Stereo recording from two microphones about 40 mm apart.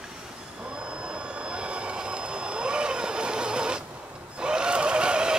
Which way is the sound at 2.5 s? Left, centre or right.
Right.